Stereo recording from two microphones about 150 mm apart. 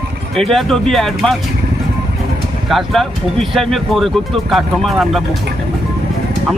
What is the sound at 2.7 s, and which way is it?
Speech, centre (ahead or behind).